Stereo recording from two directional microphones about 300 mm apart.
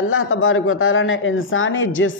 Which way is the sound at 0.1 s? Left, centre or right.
Left.